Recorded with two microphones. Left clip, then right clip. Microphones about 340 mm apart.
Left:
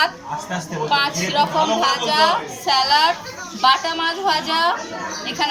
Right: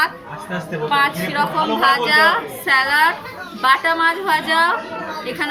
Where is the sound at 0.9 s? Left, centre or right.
Centre.